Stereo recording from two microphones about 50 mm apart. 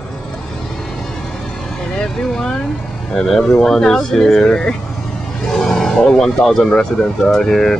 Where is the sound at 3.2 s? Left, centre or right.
Centre.